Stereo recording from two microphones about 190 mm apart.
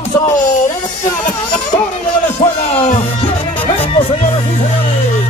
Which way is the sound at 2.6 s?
35° left (ahead or behind).